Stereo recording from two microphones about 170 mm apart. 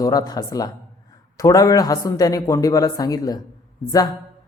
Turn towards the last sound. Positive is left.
turn(degrees=25)  # may be behind; listen again after turning